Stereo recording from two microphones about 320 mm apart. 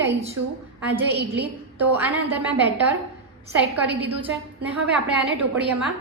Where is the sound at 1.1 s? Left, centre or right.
Right.